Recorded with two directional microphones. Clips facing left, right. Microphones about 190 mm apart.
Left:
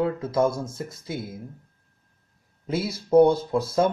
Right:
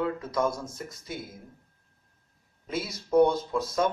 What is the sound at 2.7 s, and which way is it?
Speech, 30° left (ahead or behind).